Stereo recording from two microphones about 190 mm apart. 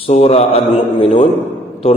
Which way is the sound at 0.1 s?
35° left (ahead or behind).